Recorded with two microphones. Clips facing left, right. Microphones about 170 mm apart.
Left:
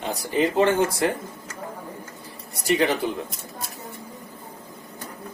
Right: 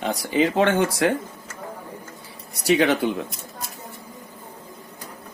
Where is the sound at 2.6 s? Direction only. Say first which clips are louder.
Right 3 dB; 70° right (ahead or behind).